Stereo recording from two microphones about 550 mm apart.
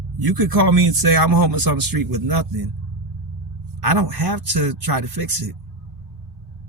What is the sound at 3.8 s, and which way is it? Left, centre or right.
Speech, right.